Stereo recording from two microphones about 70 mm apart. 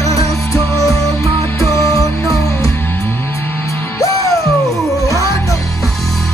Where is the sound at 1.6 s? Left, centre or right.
Right.